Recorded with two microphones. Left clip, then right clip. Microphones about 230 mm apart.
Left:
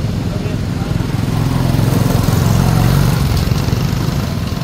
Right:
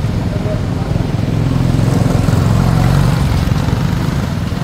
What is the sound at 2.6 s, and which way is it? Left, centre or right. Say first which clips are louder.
Vehicle: even; left.